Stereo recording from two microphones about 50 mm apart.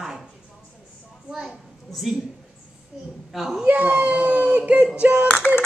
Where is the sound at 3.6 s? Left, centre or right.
Right.